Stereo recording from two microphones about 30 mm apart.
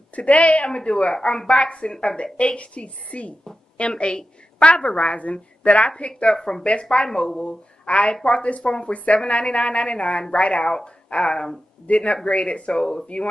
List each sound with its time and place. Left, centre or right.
0.1 s a woman's voice: left
2.3 s a woman's voice: left
6.3 s speech: left
6.6 s a woman's voice: left
8.6 s a woman's voice: left
8.9 s a woman's voice: left